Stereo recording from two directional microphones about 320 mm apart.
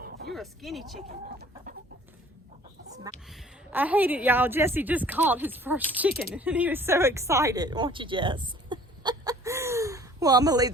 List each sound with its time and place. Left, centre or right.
0.0 s a sound: right
0.3 s a woman's voice: centre
3.2 s a woman's voice: centre